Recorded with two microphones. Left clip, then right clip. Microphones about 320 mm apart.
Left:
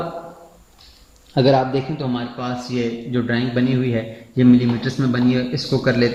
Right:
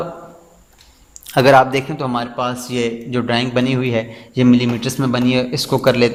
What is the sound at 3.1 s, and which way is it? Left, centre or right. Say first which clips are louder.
A man's voice: right 4 dB; right.